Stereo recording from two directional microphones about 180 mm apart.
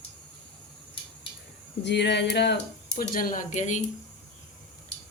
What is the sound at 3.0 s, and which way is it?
Speech, 50° left (ahead or behind).